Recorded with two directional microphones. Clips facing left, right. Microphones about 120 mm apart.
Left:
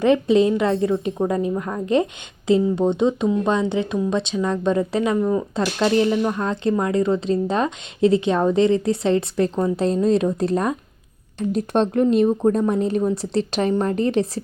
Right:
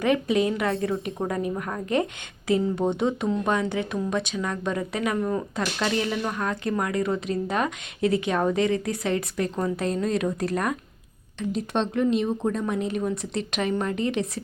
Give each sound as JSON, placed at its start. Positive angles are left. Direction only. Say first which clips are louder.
{"t": 0.0, "sound": "a woman's voice", "louder": "left 6 dB", "side_deg": 25}
{"t": 5.1, "sound": "speech", "louder": "left 6 dB", "side_deg": 15}
{"t": 5.5, "sound": "a woman's voice", "louder": "left 10 dB", "side_deg": 30}
{"t": 11.3, "sound": "a woman's voice", "louder": "left 6 dB", "side_deg": 45}